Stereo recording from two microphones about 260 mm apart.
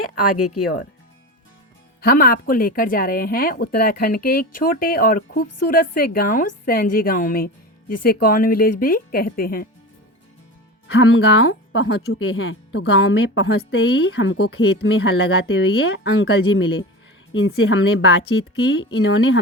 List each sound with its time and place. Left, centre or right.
0.0 s speech: left
2.0 s speech: left
5.5 s a woman's voice: left
5.7 s speech: left
10.8 s speech: left